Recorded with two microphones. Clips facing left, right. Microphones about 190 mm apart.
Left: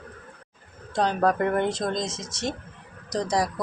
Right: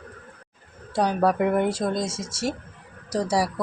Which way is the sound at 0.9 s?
10° right (ahead or behind).